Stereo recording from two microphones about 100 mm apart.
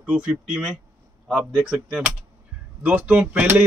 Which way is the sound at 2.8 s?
15° right (ahead or behind).